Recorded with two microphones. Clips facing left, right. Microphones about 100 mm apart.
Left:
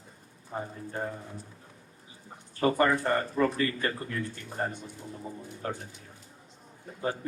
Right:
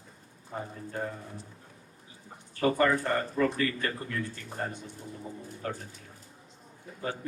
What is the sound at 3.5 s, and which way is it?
Speech, 30° left (ahead or behind).